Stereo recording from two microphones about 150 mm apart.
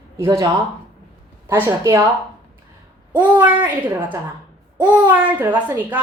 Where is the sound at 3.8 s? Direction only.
10° right (ahead or behind).